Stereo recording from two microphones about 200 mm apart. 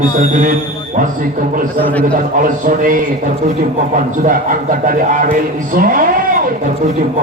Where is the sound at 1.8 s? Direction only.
10° left (ahead or behind).